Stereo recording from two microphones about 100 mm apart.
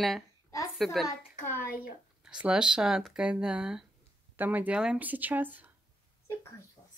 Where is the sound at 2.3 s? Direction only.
10° right (ahead or behind).